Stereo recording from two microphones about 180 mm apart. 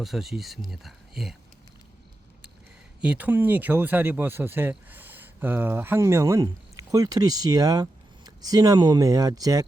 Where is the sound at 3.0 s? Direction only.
5° right (ahead or behind).